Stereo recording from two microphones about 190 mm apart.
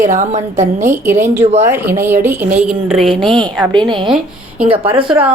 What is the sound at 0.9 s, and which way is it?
A woman's voice, 15° right (ahead or behind).